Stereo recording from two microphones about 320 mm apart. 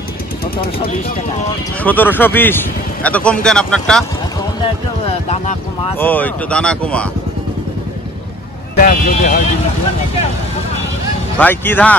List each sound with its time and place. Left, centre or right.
1.8 s speech: centre
5.3 s speech: centre
5.9 s speech: centre
8.7 s speech: left
11.3 s speech: centre